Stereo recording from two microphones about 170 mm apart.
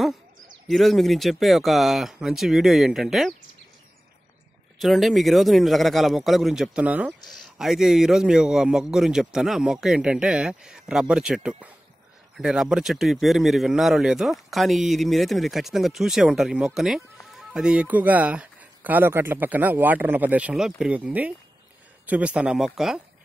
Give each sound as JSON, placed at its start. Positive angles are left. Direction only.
{"t": 0.7, "sound": "a man's voice", "side_deg": 0}
{"t": 4.7, "sound": "a man's voice", "side_deg": 0}